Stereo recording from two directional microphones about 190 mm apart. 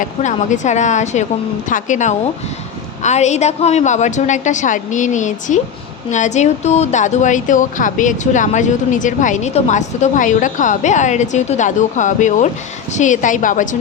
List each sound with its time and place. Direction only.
0.0 s a woman's voice: 40° left (ahead or behind)